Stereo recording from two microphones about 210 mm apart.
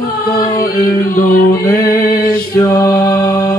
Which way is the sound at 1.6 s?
10° left (ahead or behind).